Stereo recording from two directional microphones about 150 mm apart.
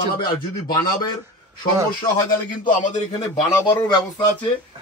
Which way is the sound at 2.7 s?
60° left (ahead or behind).